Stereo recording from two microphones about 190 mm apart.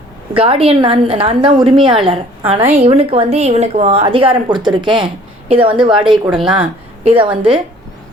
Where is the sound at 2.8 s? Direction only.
30° right (ahead or behind).